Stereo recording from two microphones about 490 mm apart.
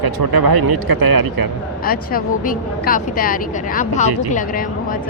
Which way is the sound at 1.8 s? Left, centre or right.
Centre.